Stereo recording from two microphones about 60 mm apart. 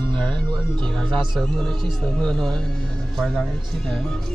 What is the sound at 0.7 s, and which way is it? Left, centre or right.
Speech, centre.